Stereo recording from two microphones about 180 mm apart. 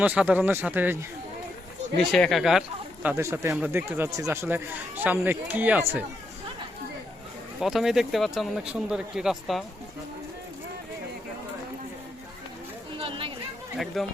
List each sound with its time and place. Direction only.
0.0 s speech: 10° right (ahead or behind)
2.0 s speech: centre (ahead or behind)
7.6 s a man's voice: centre (ahead or behind)
13.0 s chatter: 30° right (ahead or behind)
13.7 s a man's voice: centre (ahead or behind)